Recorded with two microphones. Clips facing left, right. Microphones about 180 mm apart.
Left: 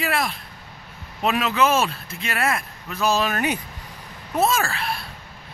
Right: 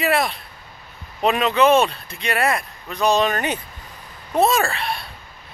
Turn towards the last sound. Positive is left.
turn(degrees=0)  # may be behind; listen again after turning